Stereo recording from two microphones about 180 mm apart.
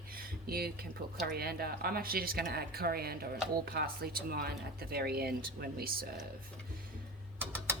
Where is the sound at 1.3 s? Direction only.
60° right (ahead or behind).